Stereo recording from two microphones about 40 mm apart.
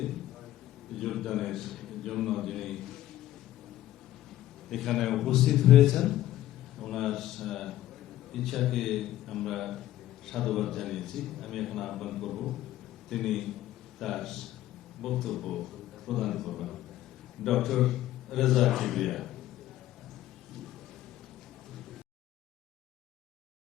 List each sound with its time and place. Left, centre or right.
0.9 s a man's voice: centre
4.7 s a man's voice: centre